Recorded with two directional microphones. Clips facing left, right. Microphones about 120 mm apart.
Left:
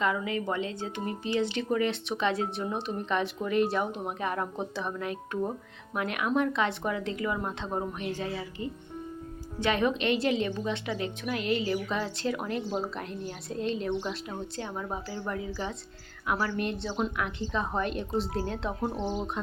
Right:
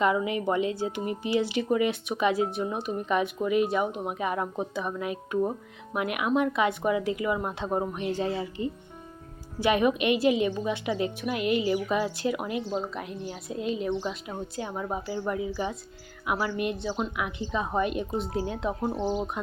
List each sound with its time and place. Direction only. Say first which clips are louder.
0.0 s speech: right 4 dB; 20° right (ahead or behind)
9.6 s speech: right 3 dB; 15° right (ahead or behind)
12.7 s speech: right 1 dB; centre (ahead or behind)